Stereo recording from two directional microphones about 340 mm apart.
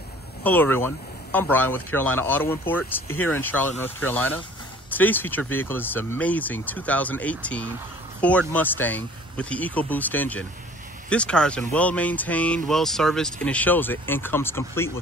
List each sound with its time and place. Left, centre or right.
0.4 s speech: centre
3.1 s speech: left
3.3 s speech: centre